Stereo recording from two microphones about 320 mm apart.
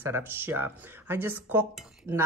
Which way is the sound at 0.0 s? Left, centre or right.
Centre.